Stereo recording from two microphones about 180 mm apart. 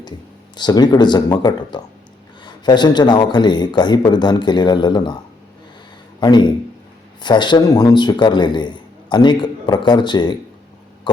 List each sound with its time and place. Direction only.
0.5 s a man's voice: 25° left (ahead or behind)
6.1 s a man's voice: 25° left (ahead or behind)